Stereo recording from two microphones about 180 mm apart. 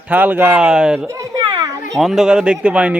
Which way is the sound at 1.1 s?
20° right (ahead or behind).